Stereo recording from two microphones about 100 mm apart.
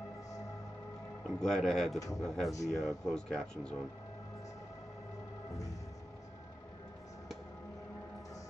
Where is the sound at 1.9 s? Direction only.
35° left (ahead or behind).